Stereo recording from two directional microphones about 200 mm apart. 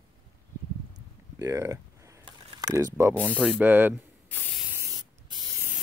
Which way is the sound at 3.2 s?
5° left (ahead or behind).